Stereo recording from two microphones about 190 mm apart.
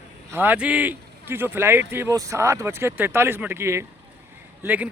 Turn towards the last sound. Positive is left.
turn(degrees=-10)  # may be behind; listen again after turning